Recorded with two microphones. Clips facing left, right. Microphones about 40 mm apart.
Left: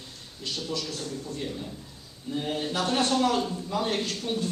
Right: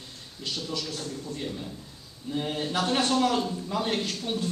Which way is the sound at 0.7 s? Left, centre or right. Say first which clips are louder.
Left 1 dB; centre.